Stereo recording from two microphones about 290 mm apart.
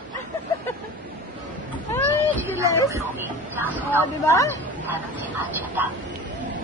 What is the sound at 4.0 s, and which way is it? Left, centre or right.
Speech, centre.